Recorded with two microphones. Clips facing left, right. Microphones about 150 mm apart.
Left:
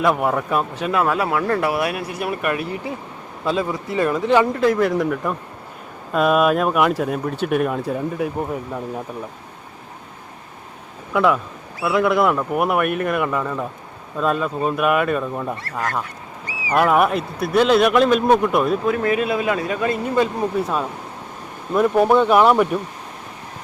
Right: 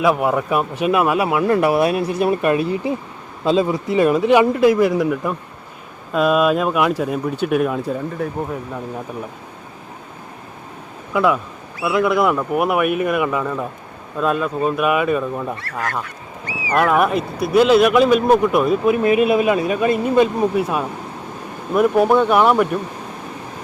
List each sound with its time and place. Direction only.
0.0 s speech: 5° right (ahead or behind)
11.1 s speech: centre (ahead or behind)
16.7 s speech: 5° left (ahead or behind)
18.9 s speech: 20° right (ahead or behind)
20.6 s speech: 5° right (ahead or behind)